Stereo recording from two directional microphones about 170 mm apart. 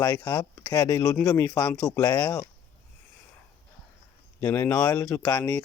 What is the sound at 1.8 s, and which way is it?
Speech, 20° left (ahead or behind).